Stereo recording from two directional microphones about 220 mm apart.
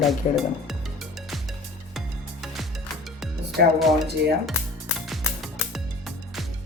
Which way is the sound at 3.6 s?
50° right (ahead or behind).